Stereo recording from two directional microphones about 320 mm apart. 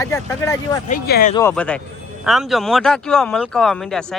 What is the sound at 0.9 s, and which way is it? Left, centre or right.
Speech, left.